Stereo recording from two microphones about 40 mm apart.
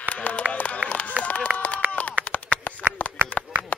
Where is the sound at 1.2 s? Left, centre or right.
Left.